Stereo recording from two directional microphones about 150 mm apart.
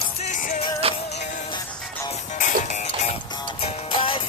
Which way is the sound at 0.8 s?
40° right (ahead or behind).